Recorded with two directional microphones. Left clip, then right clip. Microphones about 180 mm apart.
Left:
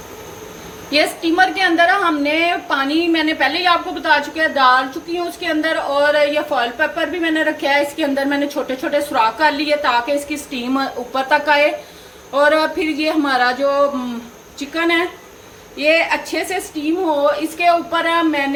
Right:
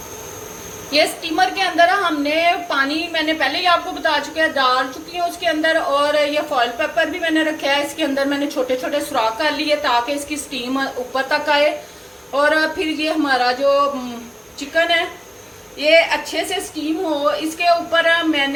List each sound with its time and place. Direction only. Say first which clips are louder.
0.9 s a woman's voice: left 1 dB; 40° left (ahead or behind)
15.8 s a woman's voice: right 1 dB; 45° left (ahead or behind)